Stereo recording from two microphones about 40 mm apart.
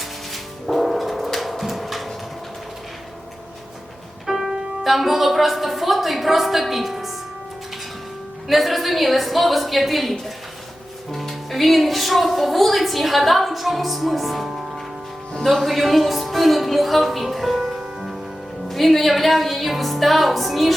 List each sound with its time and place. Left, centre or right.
0.7 s a sound: centre
4.3 s music: centre
4.8 s a woman's voice: centre
8.4 s a woman's voice: centre
14.5 s music: centre
15.6 s a woman's voice: centre